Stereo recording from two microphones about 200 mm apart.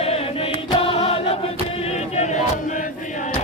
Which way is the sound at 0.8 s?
30° left (ahead or behind).